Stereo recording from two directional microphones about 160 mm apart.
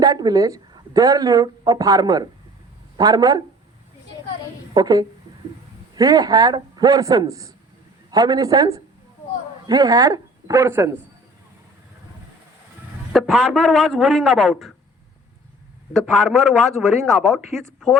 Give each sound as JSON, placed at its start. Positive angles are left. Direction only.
{"t": 0.0, "sound": "a man's voice", "side_deg": -25}
{"t": 4.7, "sound": "a woman's voice", "side_deg": -25}
{"t": 13.1, "sound": "a man's voice", "side_deg": 0}
{"t": 15.9, "sound": "a man's voice", "side_deg": 5}